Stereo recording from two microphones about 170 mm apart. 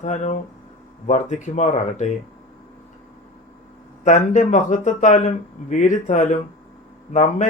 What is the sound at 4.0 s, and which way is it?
Speech, 45° left (ahead or behind).